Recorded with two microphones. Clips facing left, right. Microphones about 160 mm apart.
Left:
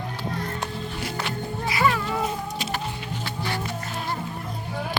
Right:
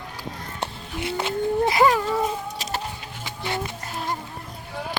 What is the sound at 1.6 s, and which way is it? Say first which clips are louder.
Cat: right 3 dB; 40° right (ahead or behind).